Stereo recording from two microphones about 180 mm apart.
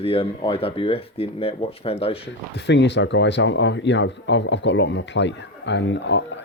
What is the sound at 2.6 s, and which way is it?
Speech, 75° left (ahead or behind).